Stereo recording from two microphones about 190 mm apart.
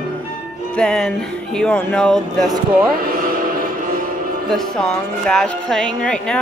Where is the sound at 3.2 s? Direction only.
50° right (ahead or behind).